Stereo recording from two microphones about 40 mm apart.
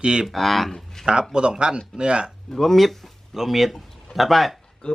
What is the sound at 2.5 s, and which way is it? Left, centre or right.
Speech, centre.